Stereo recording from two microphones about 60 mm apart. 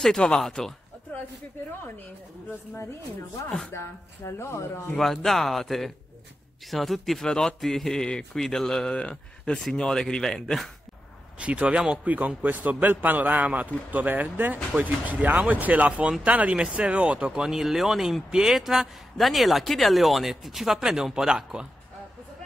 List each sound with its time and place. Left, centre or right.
0.0 s a man's voice: centre
2.8 s speech: left
4.9 s a man's voice: centre
11.3 s a man's voice: centre
17.3 s speech: centre